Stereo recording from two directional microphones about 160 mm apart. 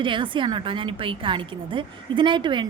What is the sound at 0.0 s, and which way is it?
A woman's voice, 30° right (ahead or behind).